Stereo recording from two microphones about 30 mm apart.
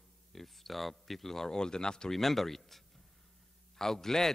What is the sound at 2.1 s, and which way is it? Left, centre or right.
A man's voice, centre.